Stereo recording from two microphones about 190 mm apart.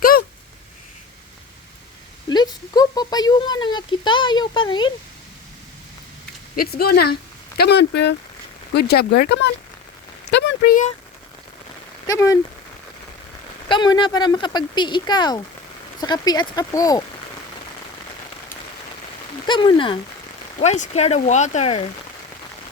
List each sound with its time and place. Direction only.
2.3 s speech: 20° left (ahead or behind)
6.6 s speech: 55° left (ahead or behind)
12.0 s speech: 15° left (ahead or behind)
13.7 s speech: 25° left (ahead or behind)
19.5 s speech: 25° left (ahead or behind)
20.6 s speech: 40° left (ahead or behind)